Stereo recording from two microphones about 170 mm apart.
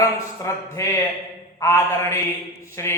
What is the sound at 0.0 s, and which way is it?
A man's voice, 20° left (ahead or behind).